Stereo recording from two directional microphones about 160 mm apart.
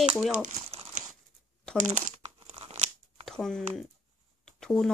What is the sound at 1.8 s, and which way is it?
Speech, 50° right (ahead or behind).